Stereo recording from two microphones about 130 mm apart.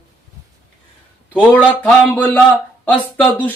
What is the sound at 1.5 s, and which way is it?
Speech, 15° left (ahead or behind).